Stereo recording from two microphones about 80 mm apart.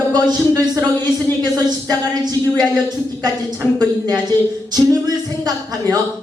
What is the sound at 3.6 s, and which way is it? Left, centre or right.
Speech, left.